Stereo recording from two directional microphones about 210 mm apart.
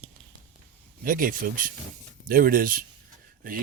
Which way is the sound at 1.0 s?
40° right (ahead or behind).